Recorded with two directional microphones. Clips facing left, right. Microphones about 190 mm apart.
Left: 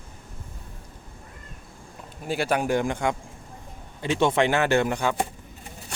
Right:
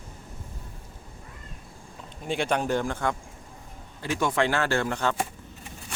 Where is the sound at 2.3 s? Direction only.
5° left (ahead or behind).